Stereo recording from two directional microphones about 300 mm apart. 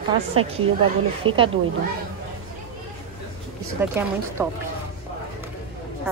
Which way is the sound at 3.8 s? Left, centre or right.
Centre.